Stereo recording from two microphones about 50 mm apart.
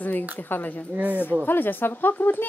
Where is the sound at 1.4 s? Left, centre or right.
Left.